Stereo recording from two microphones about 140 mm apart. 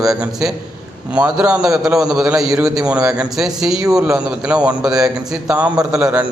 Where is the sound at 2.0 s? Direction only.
5° right (ahead or behind).